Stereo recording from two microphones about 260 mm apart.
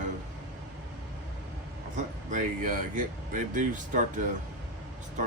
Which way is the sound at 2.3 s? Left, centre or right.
Right.